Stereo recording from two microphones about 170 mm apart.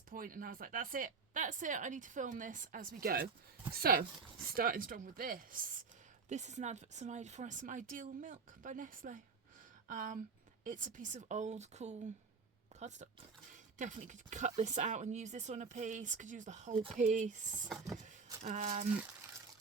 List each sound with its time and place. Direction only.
0.1 s speech: 55° right (ahead or behind)
6.2 s speech: 45° right (ahead or behind)
13.7 s speech: 50° right (ahead or behind)